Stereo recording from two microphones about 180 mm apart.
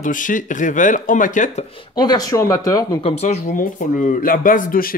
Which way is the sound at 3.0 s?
40° left (ahead or behind).